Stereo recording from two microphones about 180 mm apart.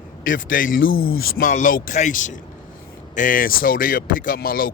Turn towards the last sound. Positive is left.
turn(degrees=55)  # may be behind; listen again after turning